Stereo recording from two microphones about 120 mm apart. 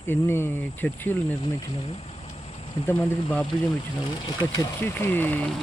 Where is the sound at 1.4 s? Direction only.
50° left (ahead or behind).